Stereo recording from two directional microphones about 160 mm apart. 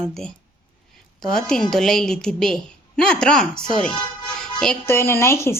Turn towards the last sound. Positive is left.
turn(degrees=15)  # may be behind; listen again after turning